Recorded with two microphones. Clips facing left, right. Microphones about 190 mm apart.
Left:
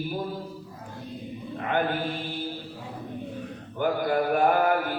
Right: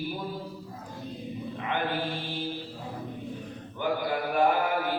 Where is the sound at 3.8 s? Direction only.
50° left (ahead or behind).